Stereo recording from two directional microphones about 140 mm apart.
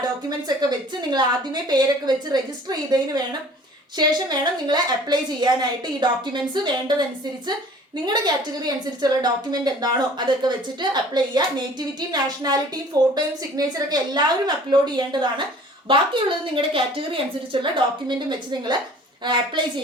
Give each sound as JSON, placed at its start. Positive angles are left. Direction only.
{"t": 0.0, "sound": "a woman's voice", "side_deg": -30}
{"t": 8.0, "sound": "a woman's voice", "side_deg": -30}